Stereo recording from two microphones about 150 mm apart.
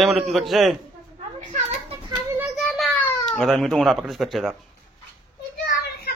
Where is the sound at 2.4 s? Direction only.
Centre (ahead or behind).